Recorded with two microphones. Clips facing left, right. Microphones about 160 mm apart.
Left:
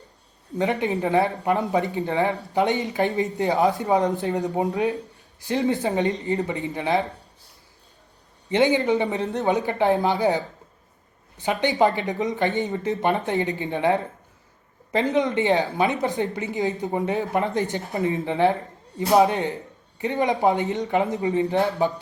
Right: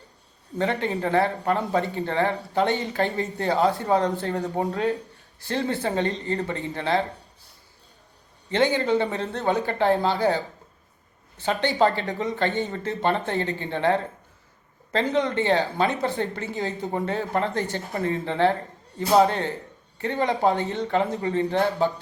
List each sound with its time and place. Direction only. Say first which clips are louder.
0.6 s speech: left 2 dB; 15° left (ahead or behind)
8.4 s speech: left 2 dB; 15° left (ahead or behind)